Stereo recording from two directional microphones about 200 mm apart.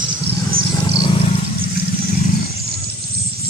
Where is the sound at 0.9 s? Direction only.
20° left (ahead or behind).